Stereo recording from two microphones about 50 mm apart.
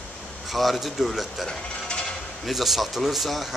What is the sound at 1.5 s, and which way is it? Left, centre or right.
Mechanisms, centre.